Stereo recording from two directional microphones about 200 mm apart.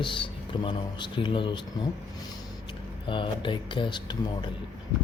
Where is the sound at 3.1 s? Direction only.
25° left (ahead or behind).